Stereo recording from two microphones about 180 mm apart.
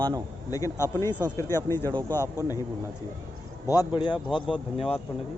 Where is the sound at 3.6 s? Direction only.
25° left (ahead or behind).